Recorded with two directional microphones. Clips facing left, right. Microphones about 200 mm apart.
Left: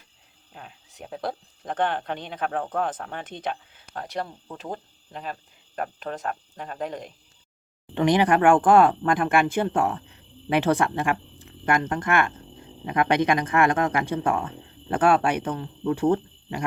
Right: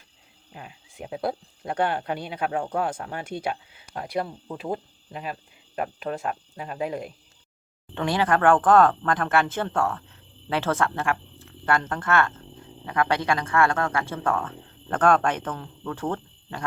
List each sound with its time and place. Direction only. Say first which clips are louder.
0.5 s speech: right 2 dB; 10° right (ahead or behind)
7.9 s speech: left 4 dB; 15° left (ahead or behind)